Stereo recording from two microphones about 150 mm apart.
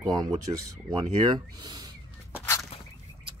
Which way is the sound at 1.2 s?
30° right (ahead or behind).